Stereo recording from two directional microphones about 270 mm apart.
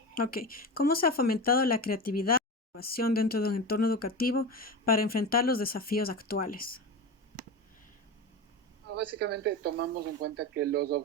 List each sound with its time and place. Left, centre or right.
0.1 s speech: left
2.2 s a sound: left
3.1 s speech: left
9.1 s speech: right